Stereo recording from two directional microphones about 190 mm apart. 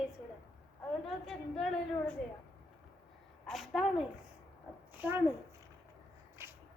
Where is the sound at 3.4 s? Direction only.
Centre (ahead or behind).